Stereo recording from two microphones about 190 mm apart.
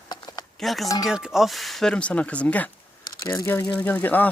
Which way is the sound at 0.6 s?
Centre (ahead or behind).